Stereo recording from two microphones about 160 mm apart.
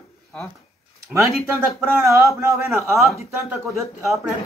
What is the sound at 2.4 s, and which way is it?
Speech, 20° right (ahead or behind).